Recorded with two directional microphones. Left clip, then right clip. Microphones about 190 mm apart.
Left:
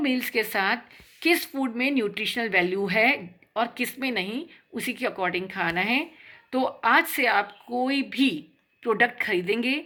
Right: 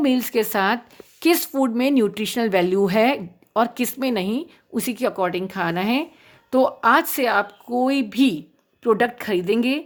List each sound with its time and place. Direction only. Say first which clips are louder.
0.0 s a woman's voice: right 5 dB; 50° right (ahead or behind)